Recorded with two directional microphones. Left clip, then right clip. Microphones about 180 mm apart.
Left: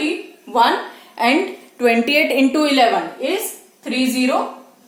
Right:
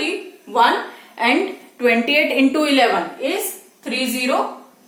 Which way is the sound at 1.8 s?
70° left (ahead or behind).